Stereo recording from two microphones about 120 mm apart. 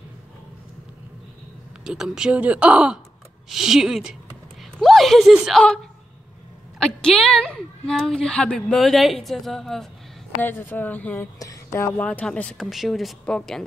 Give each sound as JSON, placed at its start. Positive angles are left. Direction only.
{"t": 1.9, "sound": "speech", "side_deg": -5}
{"t": 6.8, "sound": "a woman's voice", "side_deg": 5}
{"t": 10.4, "sound": "a woman's voice", "side_deg": 15}
{"t": 11.3, "sound": "speech", "side_deg": 25}
{"t": 12.0, "sound": "a woman's voice", "side_deg": 10}
{"t": 12.5, "sound": "speech", "side_deg": 0}